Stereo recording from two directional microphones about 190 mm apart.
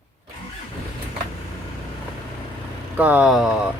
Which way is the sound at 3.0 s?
10° right (ahead or behind).